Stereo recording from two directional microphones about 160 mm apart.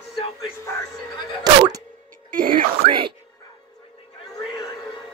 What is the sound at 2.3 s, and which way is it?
Music, 60° right (ahead or behind).